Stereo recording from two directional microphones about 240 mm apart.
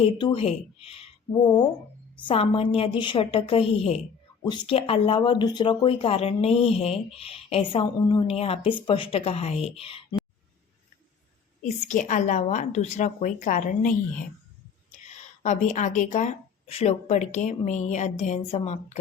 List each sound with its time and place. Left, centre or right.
0.0 s speech: left
11.9 s a woman's voice: left